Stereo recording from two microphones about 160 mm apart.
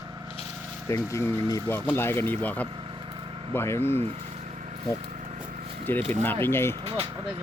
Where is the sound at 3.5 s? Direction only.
15° left (ahead or behind).